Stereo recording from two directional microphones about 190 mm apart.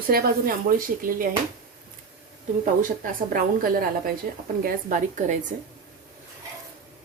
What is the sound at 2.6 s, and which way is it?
A woman's voice, 45° right (ahead or behind).